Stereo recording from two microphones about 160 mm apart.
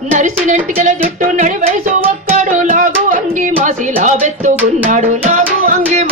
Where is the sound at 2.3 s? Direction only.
50° right (ahead or behind).